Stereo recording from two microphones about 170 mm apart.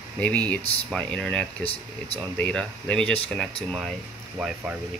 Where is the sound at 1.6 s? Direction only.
35° left (ahead or behind).